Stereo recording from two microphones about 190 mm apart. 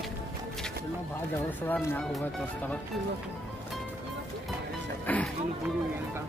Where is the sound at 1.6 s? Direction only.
10° left (ahead or behind).